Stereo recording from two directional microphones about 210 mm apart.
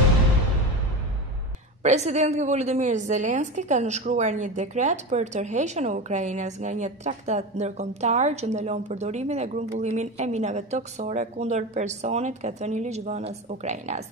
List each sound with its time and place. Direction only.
1.8 s a woman's voice: 30° right (ahead or behind)